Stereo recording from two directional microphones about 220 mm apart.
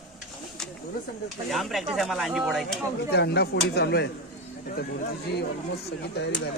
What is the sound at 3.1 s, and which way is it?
Speech, 50° left (ahead or behind).